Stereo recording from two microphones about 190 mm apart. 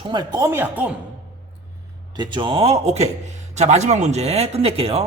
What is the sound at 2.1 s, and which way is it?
A man's voice, 25° right (ahead or behind).